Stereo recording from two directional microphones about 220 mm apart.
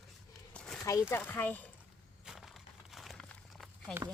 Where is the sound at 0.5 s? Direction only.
Centre (ahead or behind).